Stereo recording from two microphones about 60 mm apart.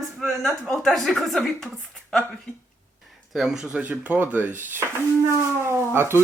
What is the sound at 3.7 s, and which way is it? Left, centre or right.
Speech, right.